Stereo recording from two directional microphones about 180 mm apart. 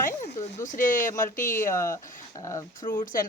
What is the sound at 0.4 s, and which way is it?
A woman's voice, 45° left (ahead or behind).